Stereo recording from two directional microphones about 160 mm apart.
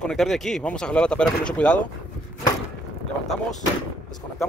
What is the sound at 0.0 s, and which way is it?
Speech, centre (ahead or behind).